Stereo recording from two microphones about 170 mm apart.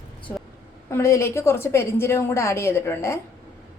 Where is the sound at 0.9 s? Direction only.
15° left (ahead or behind).